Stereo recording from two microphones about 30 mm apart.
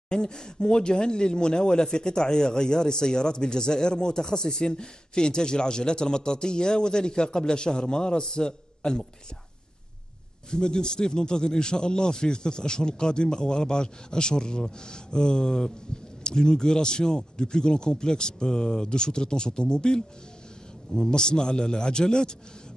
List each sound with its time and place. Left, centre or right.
0.1 s speech: left
10.5 s speech: left